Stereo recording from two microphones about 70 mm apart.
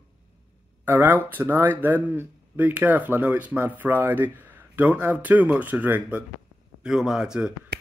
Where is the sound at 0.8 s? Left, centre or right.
Right.